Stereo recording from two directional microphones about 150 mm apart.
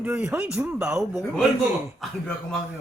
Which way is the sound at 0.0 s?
5° right (ahead or behind).